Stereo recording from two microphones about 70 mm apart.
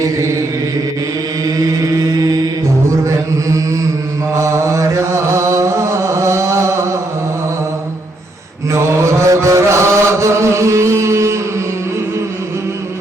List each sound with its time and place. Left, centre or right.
0.0 s chant: right
2.0 s mantra: right
4.4 s chant: right
8.7 s mantra: right